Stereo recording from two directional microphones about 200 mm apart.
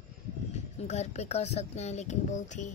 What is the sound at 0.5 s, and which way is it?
Speech, 35° left (ahead or behind).